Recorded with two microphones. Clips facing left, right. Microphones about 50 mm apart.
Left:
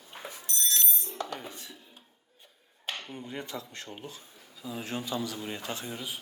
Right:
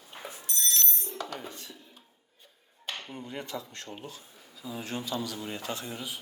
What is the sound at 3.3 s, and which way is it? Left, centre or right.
Speech, centre.